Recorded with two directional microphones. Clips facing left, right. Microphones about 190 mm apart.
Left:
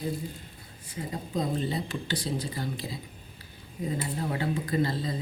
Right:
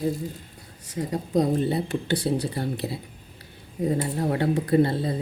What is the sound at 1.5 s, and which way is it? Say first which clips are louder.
Speech: right 6 dB; 60° right (ahead or behind).